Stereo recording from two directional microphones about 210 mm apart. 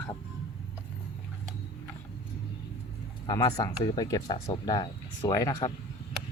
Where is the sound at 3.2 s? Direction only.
20° left (ahead or behind).